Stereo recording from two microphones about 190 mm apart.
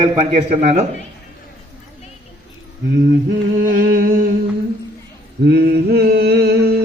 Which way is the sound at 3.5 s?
45° right (ahead or behind).